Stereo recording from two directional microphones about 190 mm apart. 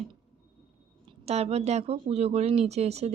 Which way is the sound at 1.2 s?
35° right (ahead or behind).